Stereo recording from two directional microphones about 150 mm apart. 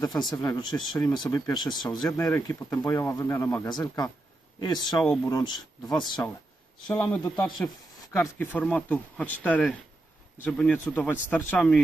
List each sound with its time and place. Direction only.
0.0 s speech: 25° left (ahead or behind)
3.6 s speech: 25° left (ahead or behind)
6.9 s speech: 5° left (ahead or behind)